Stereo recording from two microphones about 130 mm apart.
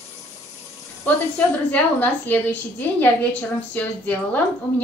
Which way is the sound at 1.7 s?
15° left (ahead or behind).